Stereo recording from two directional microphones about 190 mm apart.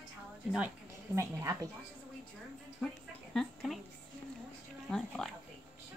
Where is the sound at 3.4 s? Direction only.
Centre (ahead or behind).